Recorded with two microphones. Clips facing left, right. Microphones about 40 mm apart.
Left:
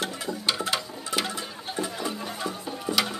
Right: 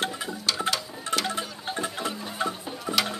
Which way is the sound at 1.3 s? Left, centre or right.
Right.